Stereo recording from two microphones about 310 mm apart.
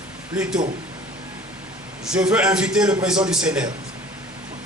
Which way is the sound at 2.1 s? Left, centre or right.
Centre.